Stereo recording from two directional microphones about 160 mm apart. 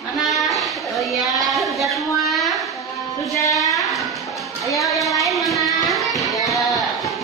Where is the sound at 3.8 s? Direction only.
Centre (ahead or behind).